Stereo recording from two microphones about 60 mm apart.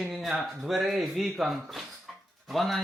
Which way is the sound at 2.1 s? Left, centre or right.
Centre.